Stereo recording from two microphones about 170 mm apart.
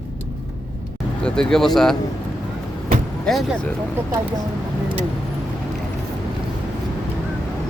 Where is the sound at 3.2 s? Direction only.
Centre (ahead or behind).